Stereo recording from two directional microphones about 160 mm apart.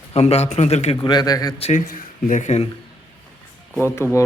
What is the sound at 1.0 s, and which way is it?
Speech, 25° left (ahead or behind).